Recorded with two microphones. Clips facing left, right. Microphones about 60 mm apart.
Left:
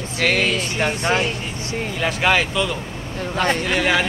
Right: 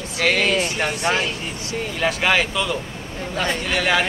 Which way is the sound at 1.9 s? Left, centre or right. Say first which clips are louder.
Left 1 dB; centre.